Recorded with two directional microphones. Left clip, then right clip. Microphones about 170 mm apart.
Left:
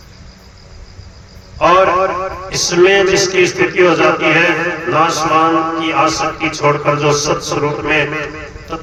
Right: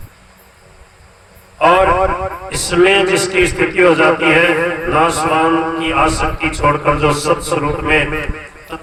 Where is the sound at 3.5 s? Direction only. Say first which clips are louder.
Even; 25° right (ahead or behind).